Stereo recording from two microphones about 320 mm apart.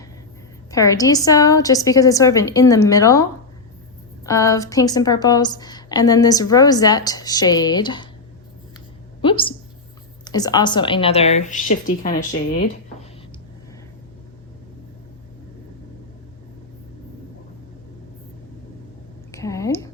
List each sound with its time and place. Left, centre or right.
0.7 s a woman's voice: centre
4.3 s a woman's voice: centre
9.2 s a woman's voice: centre
19.3 s a sound: centre